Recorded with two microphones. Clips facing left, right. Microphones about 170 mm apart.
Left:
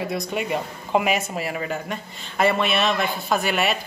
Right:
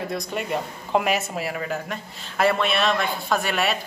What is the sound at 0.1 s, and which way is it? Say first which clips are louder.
Speech: left 2 dB; 5° left (ahead or behind).